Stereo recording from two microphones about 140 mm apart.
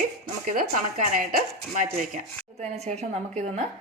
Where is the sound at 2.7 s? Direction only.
50° right (ahead or behind).